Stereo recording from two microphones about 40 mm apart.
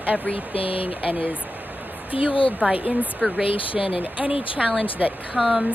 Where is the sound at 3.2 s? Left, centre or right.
Centre.